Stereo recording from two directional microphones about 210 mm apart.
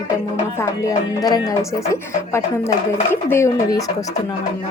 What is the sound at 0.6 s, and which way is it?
Speech, 15° left (ahead or behind).